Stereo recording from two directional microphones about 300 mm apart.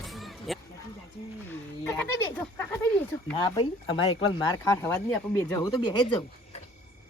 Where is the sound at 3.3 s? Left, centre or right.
Centre.